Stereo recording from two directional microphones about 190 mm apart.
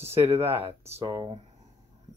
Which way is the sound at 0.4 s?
10° right (ahead or behind).